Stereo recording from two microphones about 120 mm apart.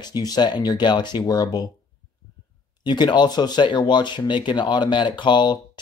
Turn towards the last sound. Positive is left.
turn(degrees=40)  # may be behind; listen again after turning